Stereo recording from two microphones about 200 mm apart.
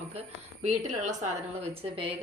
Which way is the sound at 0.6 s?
35° right (ahead or behind).